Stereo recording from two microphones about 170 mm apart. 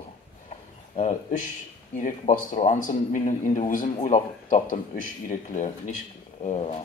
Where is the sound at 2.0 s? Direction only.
50° left (ahead or behind).